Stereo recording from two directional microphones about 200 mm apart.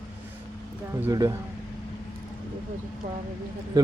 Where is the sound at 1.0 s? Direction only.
15° right (ahead or behind).